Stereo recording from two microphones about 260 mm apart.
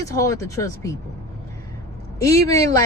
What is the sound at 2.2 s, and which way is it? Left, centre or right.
Speech, centre.